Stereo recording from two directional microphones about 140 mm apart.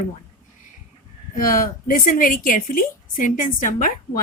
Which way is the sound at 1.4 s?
80° left.